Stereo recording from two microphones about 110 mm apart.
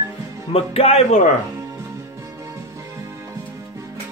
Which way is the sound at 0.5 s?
60° left (ahead or behind).